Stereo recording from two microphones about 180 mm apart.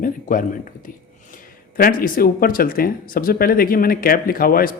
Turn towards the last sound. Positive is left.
turn(degrees=55)  # may be behind; listen again after turning